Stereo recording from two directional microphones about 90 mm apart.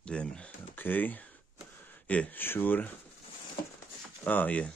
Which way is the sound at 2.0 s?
15° left (ahead or behind).